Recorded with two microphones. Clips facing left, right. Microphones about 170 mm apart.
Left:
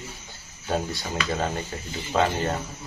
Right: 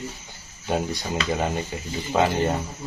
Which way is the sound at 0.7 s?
15° right (ahead or behind).